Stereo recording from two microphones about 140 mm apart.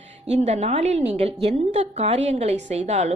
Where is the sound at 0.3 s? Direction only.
50° right (ahead or behind).